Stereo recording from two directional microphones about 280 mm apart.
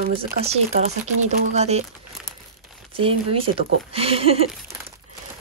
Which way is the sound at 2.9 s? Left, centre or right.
Centre.